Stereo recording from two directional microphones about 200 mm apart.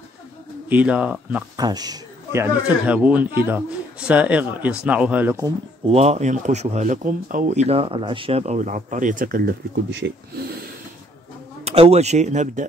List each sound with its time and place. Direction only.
0.7 s speech: 5° right (ahead or behind)
1.6 s a man's voice: 20° right (ahead or behind)
2.9 s speech: 5° right (ahead or behind)
5.9 s speech: 30° right (ahead or behind); by 10.6 s 55° right (ahead or behind)
11.6 s speech: 30° right (ahead or behind)